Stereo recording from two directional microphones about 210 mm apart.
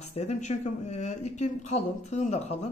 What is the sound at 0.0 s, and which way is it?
Speech, 30° left (ahead or behind).